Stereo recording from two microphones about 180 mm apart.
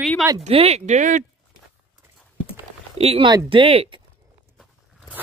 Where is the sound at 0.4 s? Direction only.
35° right (ahead or behind).